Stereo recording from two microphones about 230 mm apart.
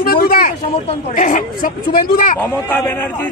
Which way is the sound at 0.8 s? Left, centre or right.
Left.